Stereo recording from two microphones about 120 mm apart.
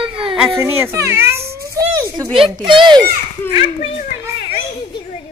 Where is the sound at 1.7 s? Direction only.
30° right (ahead or behind).